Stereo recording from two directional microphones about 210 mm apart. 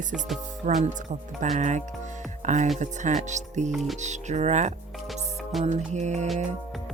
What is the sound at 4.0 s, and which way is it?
Speech, 35° right (ahead or behind).